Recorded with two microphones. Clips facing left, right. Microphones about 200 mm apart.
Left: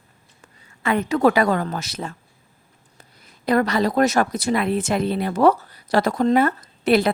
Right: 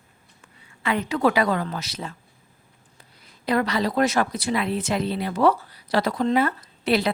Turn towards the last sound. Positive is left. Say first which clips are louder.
# left 5 dB
turn(degrees=50)  # may be behind; listen again after turning